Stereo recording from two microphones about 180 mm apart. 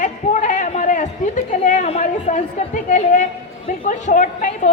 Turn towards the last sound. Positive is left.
turn(degrees=45)  # may be behind; listen again after turning